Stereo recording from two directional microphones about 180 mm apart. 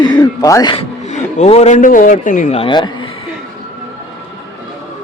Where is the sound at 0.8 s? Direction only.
40° left (ahead or behind).